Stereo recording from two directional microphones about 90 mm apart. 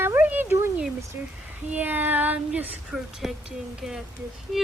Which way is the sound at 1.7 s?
20° right (ahead or behind).